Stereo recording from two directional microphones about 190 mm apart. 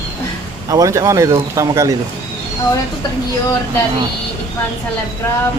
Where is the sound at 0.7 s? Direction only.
15° right (ahead or behind).